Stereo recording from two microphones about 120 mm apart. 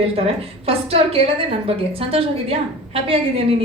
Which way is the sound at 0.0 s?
55° right (ahead or behind).